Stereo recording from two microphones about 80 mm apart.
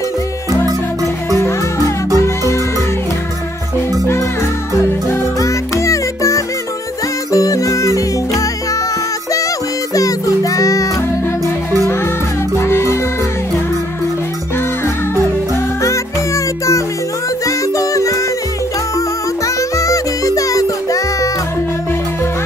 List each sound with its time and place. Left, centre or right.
1.3 s music: left
5.4 s music: left
9.9 s music: left
12.5 s music: left
17.5 s music: left